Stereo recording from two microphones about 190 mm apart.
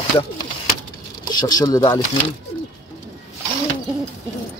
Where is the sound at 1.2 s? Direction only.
20° left (ahead or behind).